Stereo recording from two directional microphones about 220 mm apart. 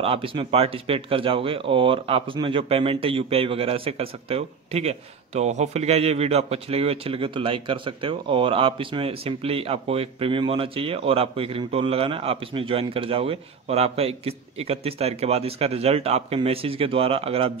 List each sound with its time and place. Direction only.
0.0 s speech: 25° right (ahead or behind)